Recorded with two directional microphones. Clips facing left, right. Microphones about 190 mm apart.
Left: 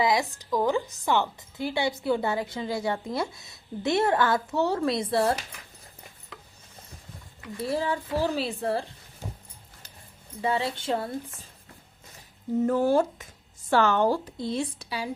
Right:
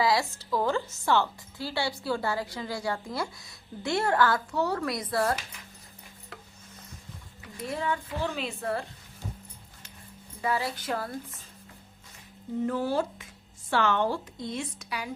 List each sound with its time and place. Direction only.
0.0 s a woman's voice: 20° left (ahead or behind)
7.5 s a woman's voice: 35° left (ahead or behind)
10.4 s a woman's voice: 25° left (ahead or behind)
12.6 s a woman's voice: 45° left (ahead or behind); by 15.1 s 30° left (ahead or behind)